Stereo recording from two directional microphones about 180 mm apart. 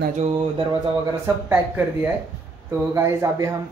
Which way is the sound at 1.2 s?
10° right (ahead or behind).